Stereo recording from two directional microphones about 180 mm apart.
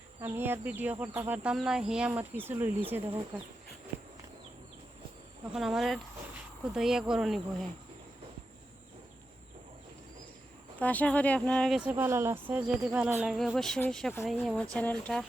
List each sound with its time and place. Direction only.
0.2 s speech: 10° right (ahead or behind)
3.0 s speech: 25° right (ahead or behind)
5.5 s speech: centre (ahead or behind)
10.8 s speech: 10° left (ahead or behind)
11.9 s speech: 15° right (ahead or behind); by 15.2 s 5° left (ahead or behind)